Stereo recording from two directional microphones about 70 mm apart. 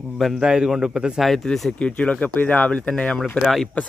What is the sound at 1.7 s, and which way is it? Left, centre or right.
Speech, centre.